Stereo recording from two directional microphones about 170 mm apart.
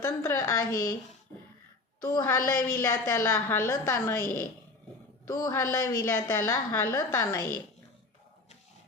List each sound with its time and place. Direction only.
0.0 s a woman's voice: 15° left (ahead or behind)
2.0 s a woman's voice: 20° left (ahead or behind)